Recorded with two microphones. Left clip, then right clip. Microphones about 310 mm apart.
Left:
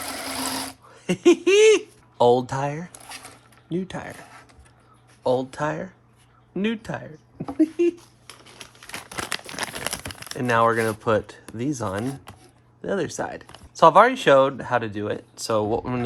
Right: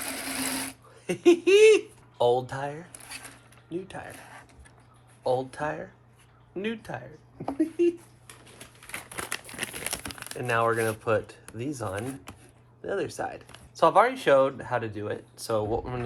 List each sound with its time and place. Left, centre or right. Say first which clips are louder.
0.9 s speech: left 3 dB; left
5.2 s speech: left 5 dB; left
8.9 s crumpling: left 5 dB; left
10.2 s speech: left 6 dB; left